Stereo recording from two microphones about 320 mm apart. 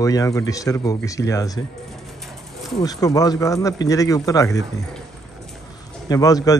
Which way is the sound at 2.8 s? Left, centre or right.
Centre.